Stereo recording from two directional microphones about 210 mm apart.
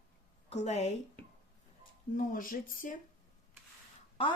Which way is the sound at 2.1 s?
40° left (ahead or behind).